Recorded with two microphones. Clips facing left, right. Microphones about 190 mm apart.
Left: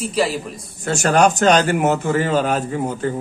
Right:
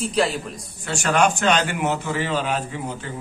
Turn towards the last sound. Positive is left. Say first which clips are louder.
# left 8 dB
turn(degrees=45)  # may be behind; listen again after turning